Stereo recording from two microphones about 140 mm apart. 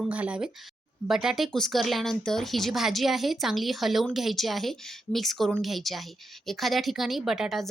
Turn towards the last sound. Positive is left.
turn(degrees=-5)  # may be behind; listen again after turning